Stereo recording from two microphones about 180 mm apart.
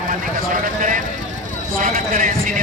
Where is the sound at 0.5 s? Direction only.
50° right (ahead or behind).